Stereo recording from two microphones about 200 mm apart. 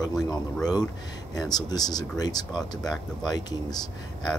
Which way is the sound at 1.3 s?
20° left (ahead or behind).